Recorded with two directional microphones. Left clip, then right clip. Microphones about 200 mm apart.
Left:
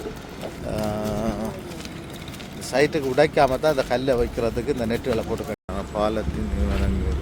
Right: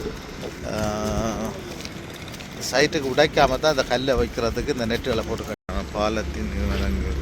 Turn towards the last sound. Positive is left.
turn(degrees=10)  # may be behind; listen again after turning